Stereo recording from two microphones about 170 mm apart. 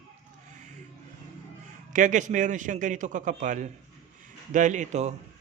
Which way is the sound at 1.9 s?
45° right (ahead or behind).